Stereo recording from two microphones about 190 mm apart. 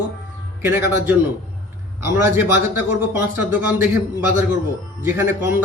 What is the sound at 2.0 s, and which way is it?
A man's voice, 10° right (ahead or behind).